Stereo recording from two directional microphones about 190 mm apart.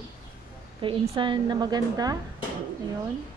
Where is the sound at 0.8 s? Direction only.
25° right (ahead or behind).